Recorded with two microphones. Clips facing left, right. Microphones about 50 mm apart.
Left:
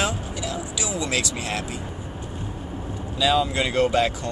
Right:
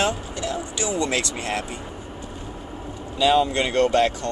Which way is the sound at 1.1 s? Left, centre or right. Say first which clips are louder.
Right 1 dB; centre.